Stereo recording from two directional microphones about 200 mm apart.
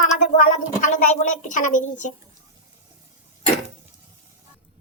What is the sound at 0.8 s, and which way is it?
A woman's voice, 35° left (ahead or behind).